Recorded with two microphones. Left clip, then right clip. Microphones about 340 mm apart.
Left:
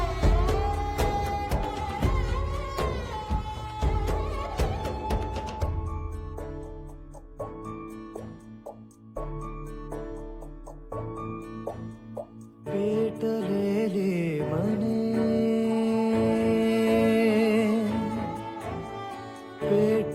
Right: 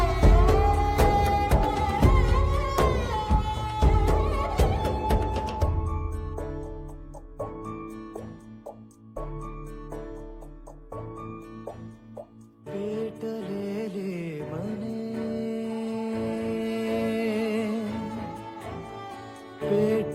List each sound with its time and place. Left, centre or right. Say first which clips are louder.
0.0 s music: right 5 dB; right
7.3 s music: right 2 dB; centre
9.1 s music: left 1 dB; centre
10.9 s music: left 3 dB; left
12.6 s music: left 5 dB; left
19.5 s music: left 1 dB; centre